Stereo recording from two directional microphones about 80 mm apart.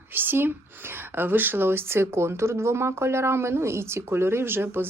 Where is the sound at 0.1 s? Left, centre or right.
Right.